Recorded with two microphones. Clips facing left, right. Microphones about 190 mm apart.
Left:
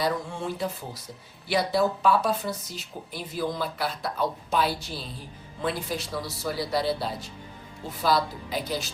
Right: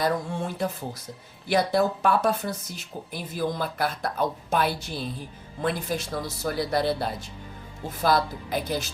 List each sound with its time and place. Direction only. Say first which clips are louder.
0.0 s speech: right 2 dB; 50° right (ahead or behind)